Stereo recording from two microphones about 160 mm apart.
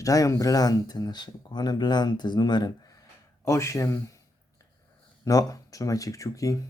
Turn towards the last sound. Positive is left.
turn(degrees=20)  # may be behind; listen again after turning